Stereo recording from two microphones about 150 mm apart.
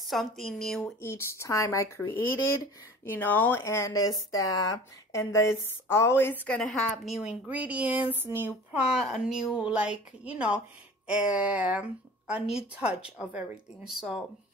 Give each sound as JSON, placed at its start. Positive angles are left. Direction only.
{"t": 0.1, "sound": "speech", "side_deg": 0}
{"t": 1.0, "sound": "speech", "side_deg": 20}
{"t": 6.4, "sound": "a woman's voice", "side_deg": 5}